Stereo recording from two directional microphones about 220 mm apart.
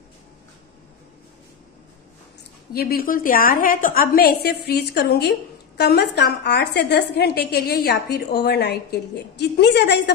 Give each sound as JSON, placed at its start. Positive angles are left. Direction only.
{"t": 2.7, "sound": "a woman's voice", "side_deg": 45}